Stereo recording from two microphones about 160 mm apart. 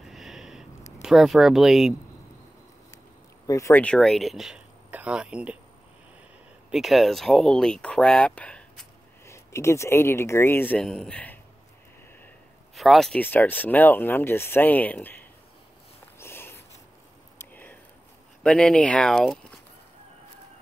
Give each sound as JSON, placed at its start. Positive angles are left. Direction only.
{"t": 0.0, "sound": "a sound", "side_deg": 0}
{"t": 1.0, "sound": "speech", "side_deg": 0}
{"t": 3.4, "sound": "speech", "side_deg": 20}
{"t": 3.8, "sound": "speech", "side_deg": 5}
{"t": 6.7, "sound": "speech", "side_deg": 0}
{"t": 9.2, "sound": "speech", "side_deg": 15}
{"t": 12.7, "sound": "speech", "side_deg": 0}
{"t": 16.2, "sound": "a sound", "side_deg": 15}
{"t": 18.4, "sound": "speech", "side_deg": 5}